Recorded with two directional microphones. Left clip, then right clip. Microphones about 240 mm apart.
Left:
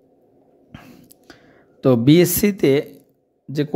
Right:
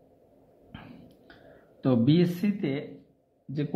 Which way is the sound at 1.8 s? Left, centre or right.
Left.